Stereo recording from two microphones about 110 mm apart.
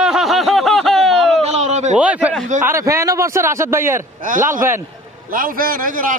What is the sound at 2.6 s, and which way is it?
A man's voice, 25° right (ahead or behind).